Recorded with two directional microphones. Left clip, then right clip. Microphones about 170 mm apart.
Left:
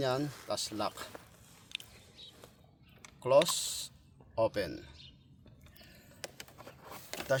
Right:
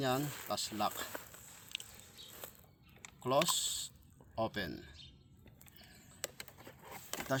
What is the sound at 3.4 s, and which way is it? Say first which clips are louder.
Speech: left 1 dB; 55° left (ahead or behind).